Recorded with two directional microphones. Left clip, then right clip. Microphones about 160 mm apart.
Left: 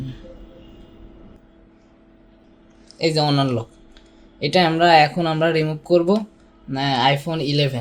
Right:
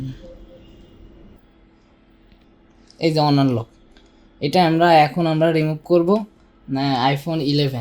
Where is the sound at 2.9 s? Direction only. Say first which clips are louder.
Right 1 dB; 45° right (ahead or behind).